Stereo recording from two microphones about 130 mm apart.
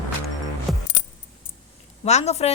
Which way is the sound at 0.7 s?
Centre (ahead or behind).